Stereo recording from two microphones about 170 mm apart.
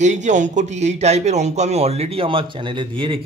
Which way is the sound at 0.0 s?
45° right (ahead or behind).